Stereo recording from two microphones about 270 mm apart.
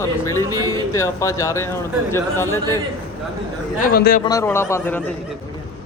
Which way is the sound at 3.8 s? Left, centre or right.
Left.